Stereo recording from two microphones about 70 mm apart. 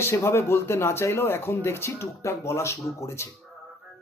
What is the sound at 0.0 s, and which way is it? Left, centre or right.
Speech, left.